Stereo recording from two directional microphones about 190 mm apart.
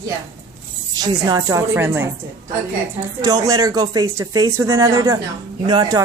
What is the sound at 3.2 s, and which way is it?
Speech, 20° right (ahead or behind).